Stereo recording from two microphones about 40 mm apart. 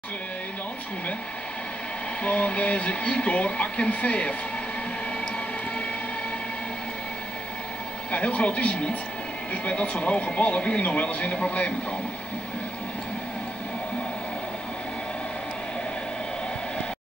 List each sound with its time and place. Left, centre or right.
2.2 s speech: left
8.1 s speech: left